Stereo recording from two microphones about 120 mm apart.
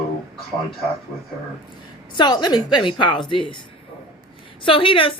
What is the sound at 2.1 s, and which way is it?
A woman's voice, 35° left (ahead or behind).